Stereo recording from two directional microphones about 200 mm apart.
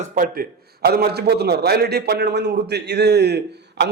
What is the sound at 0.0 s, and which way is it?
Speech, 45° right (ahead or behind).